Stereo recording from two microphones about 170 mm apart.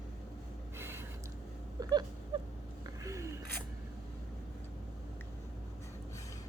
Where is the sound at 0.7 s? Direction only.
15° right (ahead or behind).